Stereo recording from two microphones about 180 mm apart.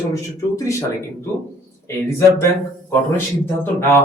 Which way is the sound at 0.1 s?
15° left (ahead or behind).